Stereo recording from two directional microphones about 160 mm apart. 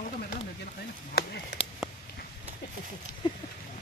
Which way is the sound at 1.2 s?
75° left (ahead or behind).